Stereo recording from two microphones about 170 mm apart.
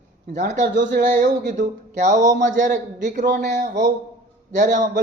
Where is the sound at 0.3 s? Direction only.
45° right (ahead or behind).